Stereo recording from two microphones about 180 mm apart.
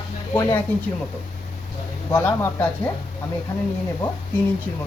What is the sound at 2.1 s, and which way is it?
Speech, 15° left (ahead or behind).